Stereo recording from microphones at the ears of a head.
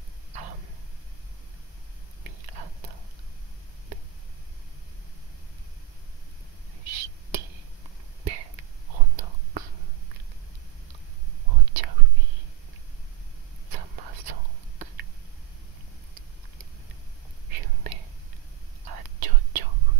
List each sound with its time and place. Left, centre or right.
0.3 s a sound: right
2.2 s whispering: right
6.8 s a sound: right
8.2 s whispering: right
11.4 s whispering: right
13.7 s whispering: right
17.5 s whispering: right